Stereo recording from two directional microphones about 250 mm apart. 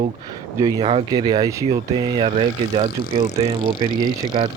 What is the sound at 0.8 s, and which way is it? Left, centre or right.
Speech, right.